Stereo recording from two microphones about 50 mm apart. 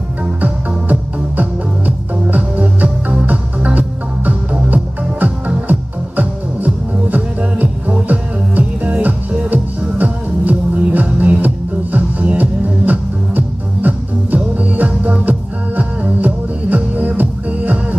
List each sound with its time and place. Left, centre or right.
0.2 s music: right